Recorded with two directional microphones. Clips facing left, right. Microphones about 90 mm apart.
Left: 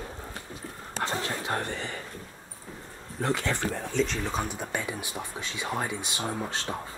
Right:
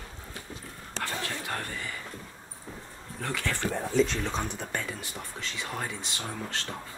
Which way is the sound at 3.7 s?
5° right (ahead or behind).